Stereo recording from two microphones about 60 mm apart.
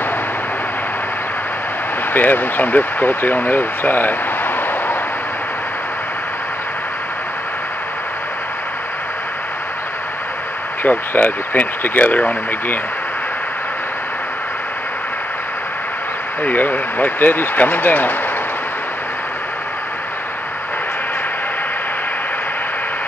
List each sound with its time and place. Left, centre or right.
2.1 s speech: left
11.1 s speech: left
16.4 s speech: left